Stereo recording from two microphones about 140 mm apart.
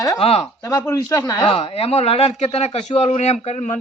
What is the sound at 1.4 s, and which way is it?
Speech, 40° left (ahead or behind).